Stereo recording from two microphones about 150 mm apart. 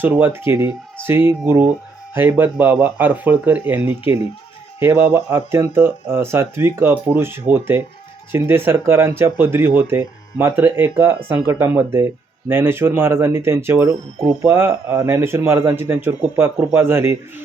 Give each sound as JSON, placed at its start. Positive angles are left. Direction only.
{"t": 0.0, "sound": "speech", "side_deg": -15}